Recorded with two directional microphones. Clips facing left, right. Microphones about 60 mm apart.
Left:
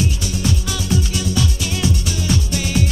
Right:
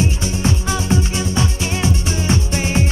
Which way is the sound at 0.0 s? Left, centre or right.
Right.